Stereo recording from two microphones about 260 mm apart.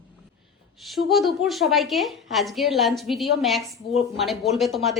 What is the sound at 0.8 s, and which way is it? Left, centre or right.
A woman's voice, centre.